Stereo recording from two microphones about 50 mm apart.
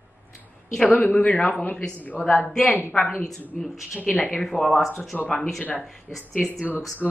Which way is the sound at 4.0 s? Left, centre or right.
Left.